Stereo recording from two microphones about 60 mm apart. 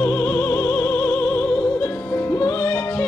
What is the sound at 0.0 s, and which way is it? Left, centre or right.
Music, left.